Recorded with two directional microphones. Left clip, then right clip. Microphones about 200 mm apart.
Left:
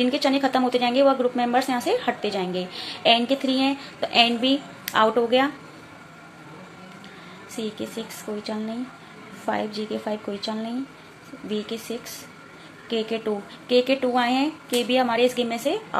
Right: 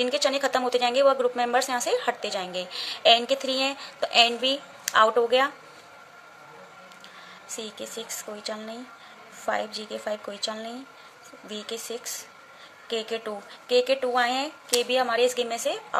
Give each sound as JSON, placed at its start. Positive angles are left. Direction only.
{"t": 0.0, "sound": "a woman's voice", "side_deg": -25}
{"t": 7.5, "sound": "a woman's voice", "side_deg": -25}